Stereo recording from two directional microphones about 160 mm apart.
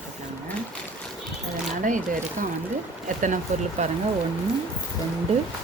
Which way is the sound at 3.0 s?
50° right (ahead or behind).